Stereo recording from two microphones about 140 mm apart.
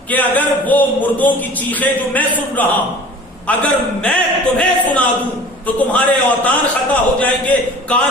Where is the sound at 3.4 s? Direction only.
10° left (ahead or behind).